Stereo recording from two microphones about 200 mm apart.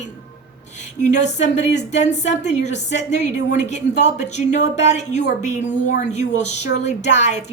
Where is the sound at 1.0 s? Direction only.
35° left (ahead or behind).